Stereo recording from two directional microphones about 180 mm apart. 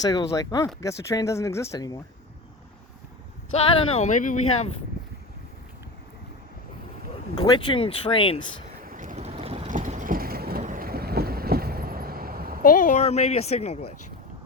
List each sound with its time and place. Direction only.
0.0 s speech: 20° left (ahead or behind)
3.5 s speech: 35° left (ahead or behind)
7.3 s speech: 25° left (ahead or behind)
8.8 s boat: 50° right (ahead or behind); by 9.7 s 35° right (ahead or behind)
9.7 s vehicle: 45° right (ahead or behind)
12.6 s speech: 45° left (ahead or behind)